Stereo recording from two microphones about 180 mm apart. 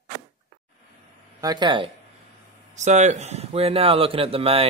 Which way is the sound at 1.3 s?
20° right (ahead or behind).